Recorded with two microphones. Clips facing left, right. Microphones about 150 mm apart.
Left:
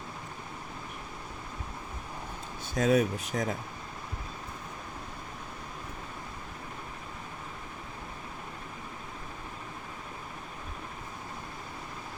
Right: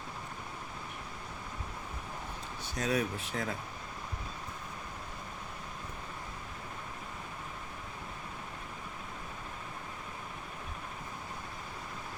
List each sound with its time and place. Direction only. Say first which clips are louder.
2.7 s speech: left 7 dB; 50° left (ahead or behind)